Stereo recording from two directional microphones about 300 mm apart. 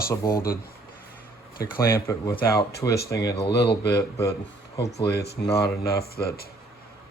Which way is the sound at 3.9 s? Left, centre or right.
Centre.